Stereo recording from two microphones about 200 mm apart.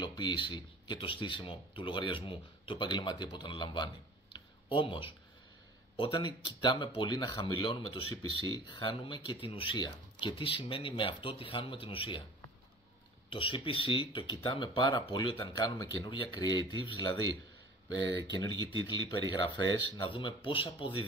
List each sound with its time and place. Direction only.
0.0 s speech: 20° left (ahead or behind)
13.3 s speech: 25° left (ahead or behind)